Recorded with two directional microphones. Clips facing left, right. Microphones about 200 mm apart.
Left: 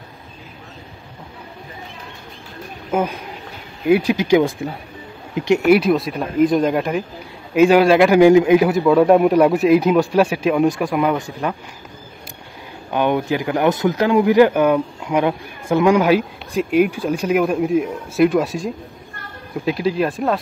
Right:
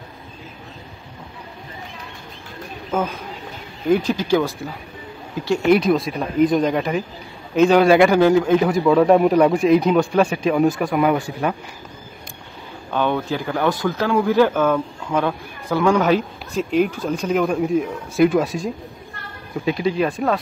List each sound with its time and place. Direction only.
2.9 s speech: 10° left (ahead or behind)
5.6 s speech: 5° left (ahead or behind)
8.2 s speech: 15° left (ahead or behind)
12.9 s speech: 15° left (ahead or behind)